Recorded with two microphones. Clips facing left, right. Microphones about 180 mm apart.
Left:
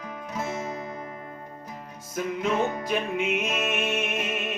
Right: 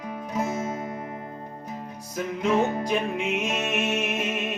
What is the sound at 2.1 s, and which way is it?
Music, centre (ahead or behind).